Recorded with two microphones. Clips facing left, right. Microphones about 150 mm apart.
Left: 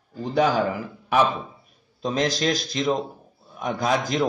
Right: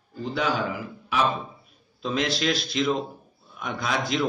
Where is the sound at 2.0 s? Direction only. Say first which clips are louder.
Left 2 dB; 40° left (ahead or behind).